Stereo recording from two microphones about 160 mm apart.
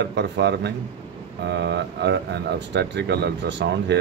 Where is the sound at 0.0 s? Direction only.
90° right.